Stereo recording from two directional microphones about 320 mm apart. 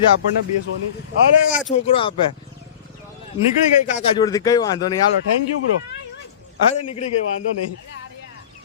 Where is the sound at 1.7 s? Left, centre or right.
Centre.